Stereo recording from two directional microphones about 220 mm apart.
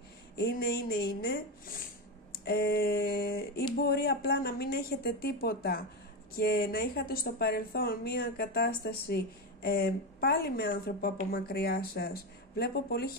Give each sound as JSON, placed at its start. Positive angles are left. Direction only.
{"t": 0.4, "sound": "speech", "side_deg": 45}